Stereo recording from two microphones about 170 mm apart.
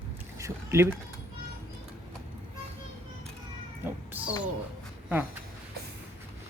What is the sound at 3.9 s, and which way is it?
Speech, 10° right (ahead or behind).